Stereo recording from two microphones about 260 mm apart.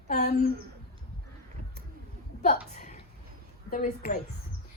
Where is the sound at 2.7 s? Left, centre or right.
Left.